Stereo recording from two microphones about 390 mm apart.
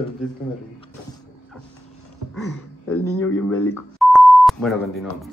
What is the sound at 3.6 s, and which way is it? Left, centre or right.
Beep, centre.